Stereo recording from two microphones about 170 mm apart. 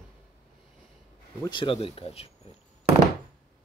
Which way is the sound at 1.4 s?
25° left (ahead or behind).